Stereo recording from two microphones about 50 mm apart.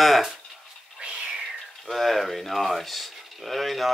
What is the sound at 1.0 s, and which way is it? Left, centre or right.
Whispering, centre.